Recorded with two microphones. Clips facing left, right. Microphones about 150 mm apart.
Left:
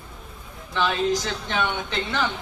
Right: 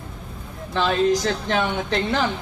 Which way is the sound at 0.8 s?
35° right (ahead or behind).